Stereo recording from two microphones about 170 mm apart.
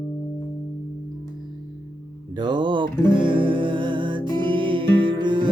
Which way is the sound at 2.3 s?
25° right (ahead or behind).